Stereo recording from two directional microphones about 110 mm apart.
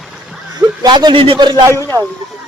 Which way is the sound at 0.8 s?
45° right (ahead or behind).